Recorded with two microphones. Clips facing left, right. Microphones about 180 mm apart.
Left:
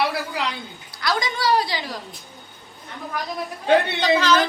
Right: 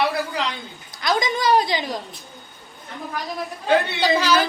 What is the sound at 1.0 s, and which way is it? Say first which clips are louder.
Speech: right 2 dB; 20° right (ahead or behind).